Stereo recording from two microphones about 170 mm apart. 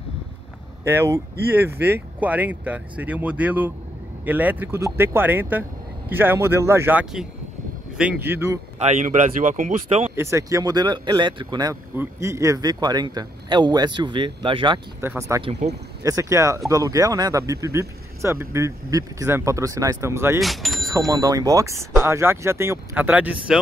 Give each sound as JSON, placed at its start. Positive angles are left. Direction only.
{"t": 0.8, "sound": "speech", "side_deg": -15}
{"t": 8.8, "sound": "speech", "side_deg": -45}
{"t": 10.1, "sound": "a man's voice", "side_deg": -15}
{"t": 15.0, "sound": "speech", "side_deg": -15}
{"t": 15.6, "sound": "speech", "side_deg": -45}
{"t": 16.0, "sound": "speech", "side_deg": -20}
{"t": 20.3, "sound": "speech", "side_deg": 0}
{"t": 21.1, "sound": "a man's voice", "side_deg": -20}